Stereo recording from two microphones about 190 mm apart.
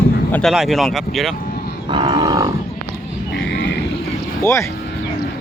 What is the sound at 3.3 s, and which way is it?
Grunt, 65° left (ahead or behind).